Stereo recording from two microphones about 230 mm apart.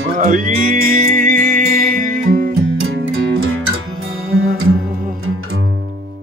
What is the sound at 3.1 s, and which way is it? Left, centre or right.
Music, right.